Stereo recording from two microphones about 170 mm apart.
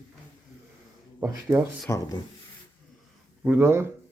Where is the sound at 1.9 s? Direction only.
20° left (ahead or behind).